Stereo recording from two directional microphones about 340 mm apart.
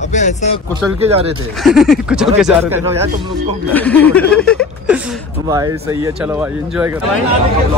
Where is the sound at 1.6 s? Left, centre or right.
Centre.